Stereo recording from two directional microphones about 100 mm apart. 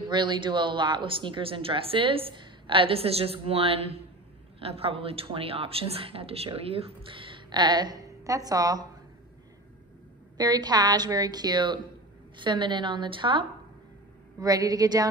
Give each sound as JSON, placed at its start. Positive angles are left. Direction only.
{"t": 0.1, "sound": "speech", "side_deg": -50}
{"t": 10.3, "sound": "a woman's voice", "side_deg": -40}
{"t": 14.4, "sound": "a woman's voice", "side_deg": -40}